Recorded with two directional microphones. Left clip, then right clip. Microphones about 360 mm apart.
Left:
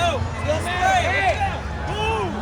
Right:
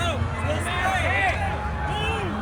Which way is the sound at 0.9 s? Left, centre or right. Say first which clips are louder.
Left 4 dB; left.